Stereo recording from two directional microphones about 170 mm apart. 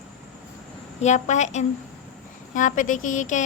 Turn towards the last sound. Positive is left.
turn(degrees=50)  # may be behind; listen again after turning